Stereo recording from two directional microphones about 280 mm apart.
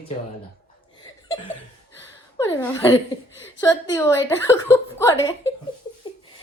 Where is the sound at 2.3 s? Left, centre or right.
Centre.